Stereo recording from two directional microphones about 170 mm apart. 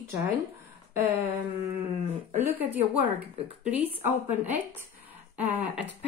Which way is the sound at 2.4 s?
10° right (ahead or behind).